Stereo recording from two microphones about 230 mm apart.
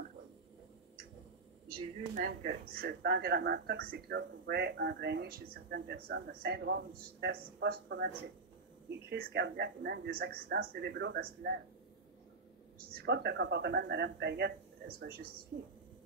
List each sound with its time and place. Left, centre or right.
2.1 s speech: right
9.1 s speech: right
13.0 s speech: right
15.5 s speech: right